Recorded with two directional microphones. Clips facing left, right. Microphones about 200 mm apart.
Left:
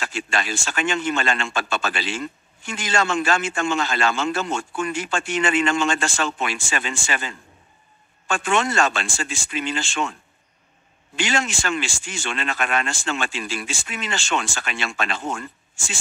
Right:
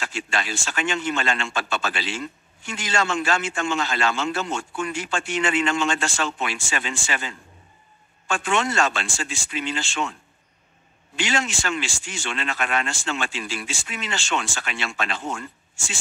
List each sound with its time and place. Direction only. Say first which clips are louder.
0.0 s a man's voice: left 2 dB; 50° left (ahead or behind)
11.1 s a man's voice: left 1 dB; 50° left (ahead or behind)